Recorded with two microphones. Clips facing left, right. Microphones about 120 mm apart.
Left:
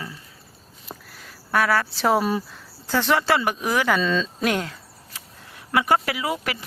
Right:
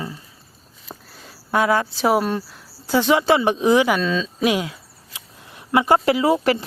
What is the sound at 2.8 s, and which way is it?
Speech, 15° right (ahead or behind).